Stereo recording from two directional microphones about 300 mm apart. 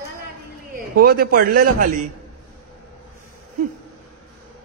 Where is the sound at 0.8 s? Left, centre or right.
Right.